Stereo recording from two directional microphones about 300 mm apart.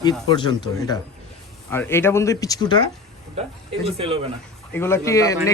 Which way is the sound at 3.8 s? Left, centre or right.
Centre.